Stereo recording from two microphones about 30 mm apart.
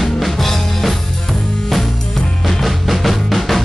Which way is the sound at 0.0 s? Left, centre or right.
Centre.